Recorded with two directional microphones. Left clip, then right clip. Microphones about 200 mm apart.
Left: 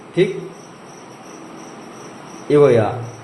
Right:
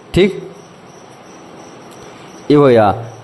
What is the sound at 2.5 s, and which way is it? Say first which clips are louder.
Speech: right 3 dB; 60° right (ahead or behind).